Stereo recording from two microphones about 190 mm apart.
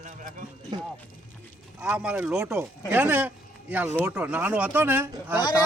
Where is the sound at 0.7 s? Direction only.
25° right (ahead or behind).